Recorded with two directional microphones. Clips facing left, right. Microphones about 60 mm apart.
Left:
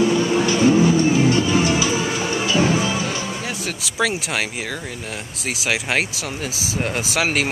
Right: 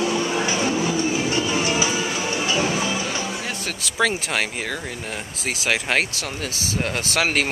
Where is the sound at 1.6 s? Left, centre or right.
Right.